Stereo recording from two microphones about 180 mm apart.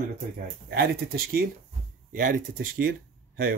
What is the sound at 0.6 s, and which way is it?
Speech, 60° right (ahead or behind).